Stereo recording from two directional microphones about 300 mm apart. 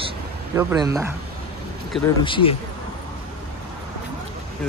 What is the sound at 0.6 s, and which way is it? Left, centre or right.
Speech, centre.